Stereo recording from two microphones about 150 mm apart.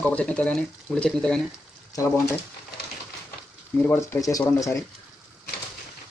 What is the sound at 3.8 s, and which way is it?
Speech, 15° left (ahead or behind).